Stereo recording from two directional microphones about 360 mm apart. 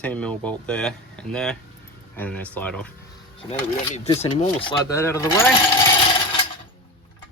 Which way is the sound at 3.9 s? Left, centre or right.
Centre.